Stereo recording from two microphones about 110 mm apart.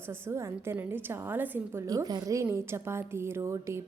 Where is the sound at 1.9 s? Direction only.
35° right (ahead or behind).